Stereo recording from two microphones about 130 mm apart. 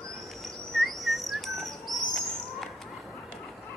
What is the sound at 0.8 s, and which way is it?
Bird, centre (ahead or behind).